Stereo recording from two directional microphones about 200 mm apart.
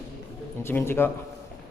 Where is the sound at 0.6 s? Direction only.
10° left (ahead or behind).